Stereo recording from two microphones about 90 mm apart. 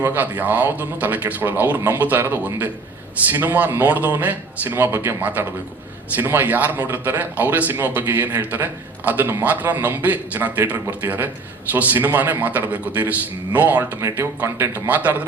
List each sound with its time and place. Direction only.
0.0 s a man's voice: 20° right (ahead or behind)